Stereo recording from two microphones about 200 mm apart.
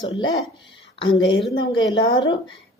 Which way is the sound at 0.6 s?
65° left (ahead or behind).